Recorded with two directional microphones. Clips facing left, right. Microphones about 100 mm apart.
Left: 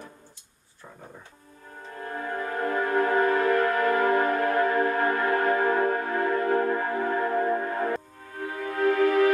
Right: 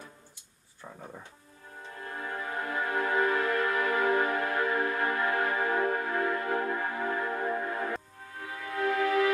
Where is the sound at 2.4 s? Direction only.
45° left (ahead or behind).